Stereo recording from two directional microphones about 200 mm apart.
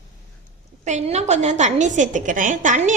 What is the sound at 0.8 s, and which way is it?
A woman's voice, 35° right (ahead or behind).